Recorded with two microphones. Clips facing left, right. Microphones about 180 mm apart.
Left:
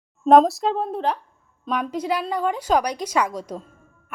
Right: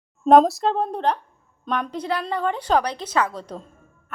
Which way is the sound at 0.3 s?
Centre (ahead or behind).